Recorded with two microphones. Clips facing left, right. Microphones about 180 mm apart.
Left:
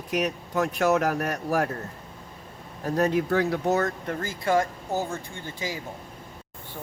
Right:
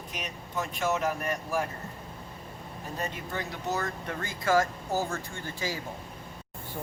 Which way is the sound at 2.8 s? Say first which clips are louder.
Left 13 dB; 70° left (ahead or behind).